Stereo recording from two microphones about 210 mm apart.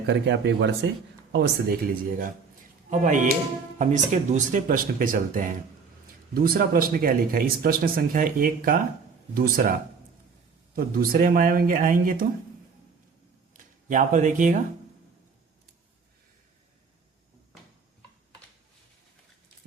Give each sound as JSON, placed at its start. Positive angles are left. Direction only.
{"t": 0.1, "sound": "speech", "side_deg": -55}
{"t": 10.8, "sound": "speech", "side_deg": -45}
{"t": 13.5, "sound": "speech", "side_deg": -35}